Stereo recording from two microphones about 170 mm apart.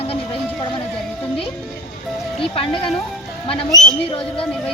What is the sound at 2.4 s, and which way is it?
Speech, 30° left (ahead or behind).